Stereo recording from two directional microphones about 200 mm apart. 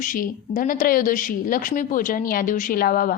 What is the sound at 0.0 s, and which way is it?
A woman's voice, 40° left (ahead or behind).